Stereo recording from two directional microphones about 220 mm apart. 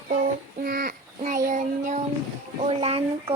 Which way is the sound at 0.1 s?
40° right (ahead or behind).